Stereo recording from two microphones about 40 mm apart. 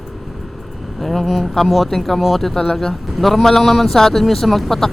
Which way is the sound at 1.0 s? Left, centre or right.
Centre.